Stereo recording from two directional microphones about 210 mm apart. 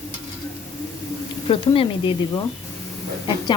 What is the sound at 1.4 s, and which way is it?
Speech, 25° left (ahead or behind).